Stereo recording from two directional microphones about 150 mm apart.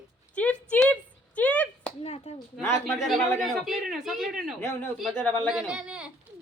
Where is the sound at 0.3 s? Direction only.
10° left (ahead or behind).